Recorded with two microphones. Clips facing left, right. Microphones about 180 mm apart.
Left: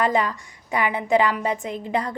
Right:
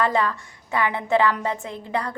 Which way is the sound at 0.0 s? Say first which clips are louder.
Left 1 dB; 15° left (ahead or behind).